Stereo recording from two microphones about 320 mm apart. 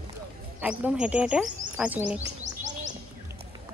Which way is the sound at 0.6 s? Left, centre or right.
Centre.